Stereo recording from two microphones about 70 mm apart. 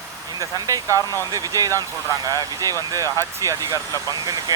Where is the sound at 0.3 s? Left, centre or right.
Right.